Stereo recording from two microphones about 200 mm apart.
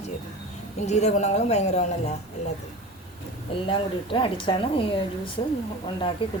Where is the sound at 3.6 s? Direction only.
25° left (ahead or behind).